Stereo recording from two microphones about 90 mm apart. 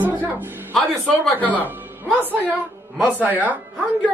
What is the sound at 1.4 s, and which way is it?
Speech, 15° left (ahead or behind).